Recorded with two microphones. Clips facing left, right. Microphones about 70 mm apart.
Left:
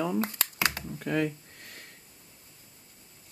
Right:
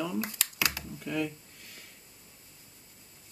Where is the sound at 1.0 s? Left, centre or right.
Left.